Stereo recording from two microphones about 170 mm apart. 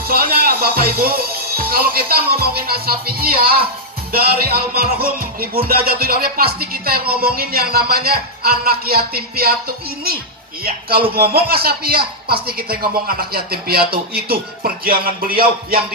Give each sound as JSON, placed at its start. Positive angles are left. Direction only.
{"t": 0.0, "sound": "speech", "side_deg": -65}